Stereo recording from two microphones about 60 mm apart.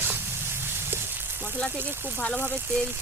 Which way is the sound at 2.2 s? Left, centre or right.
Centre.